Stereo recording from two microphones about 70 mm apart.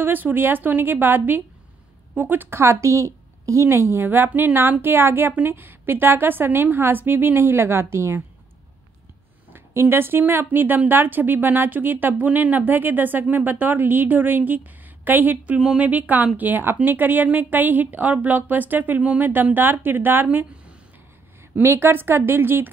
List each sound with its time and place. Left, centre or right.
0.0 s a woman's voice: right
9.5 s a woman's voice: right